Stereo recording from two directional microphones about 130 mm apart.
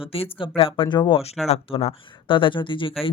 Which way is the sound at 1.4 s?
55° left (ahead or behind).